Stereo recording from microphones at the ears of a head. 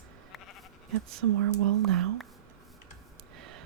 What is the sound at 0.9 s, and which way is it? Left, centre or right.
Speech, right.